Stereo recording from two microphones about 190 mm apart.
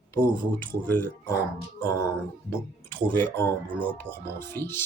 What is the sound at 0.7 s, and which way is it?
Speech, 10° left (ahead or behind).